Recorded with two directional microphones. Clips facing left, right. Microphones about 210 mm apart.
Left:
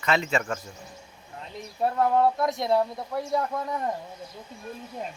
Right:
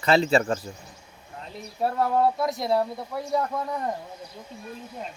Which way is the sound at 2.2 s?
Centre (ahead or behind).